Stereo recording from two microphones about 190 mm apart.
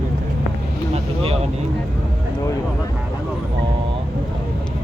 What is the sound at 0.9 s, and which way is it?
Vehicle, 30° right (ahead or behind).